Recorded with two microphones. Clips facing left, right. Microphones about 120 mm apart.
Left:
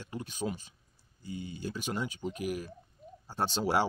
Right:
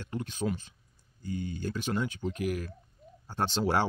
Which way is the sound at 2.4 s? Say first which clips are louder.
Right 3 dB; 45° right (ahead or behind).